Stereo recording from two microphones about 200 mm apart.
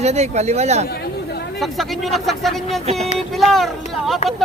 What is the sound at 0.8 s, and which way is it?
Speech, 50° left (ahead or behind).